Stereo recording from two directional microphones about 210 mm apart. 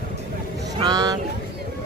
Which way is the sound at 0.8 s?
20° right (ahead or behind).